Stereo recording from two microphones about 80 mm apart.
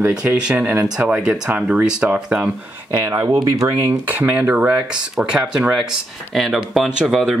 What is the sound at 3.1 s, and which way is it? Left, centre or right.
Speech, right.